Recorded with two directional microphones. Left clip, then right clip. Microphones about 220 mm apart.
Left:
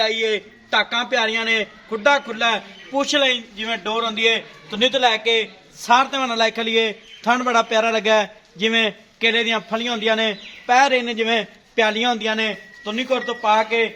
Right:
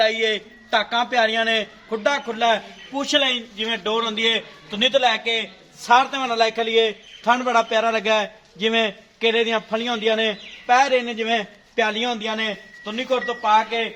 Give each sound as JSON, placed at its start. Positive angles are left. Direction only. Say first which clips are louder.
{"t": 0.0, "sound": "a man's voice", "louder": "even", "side_deg": 25}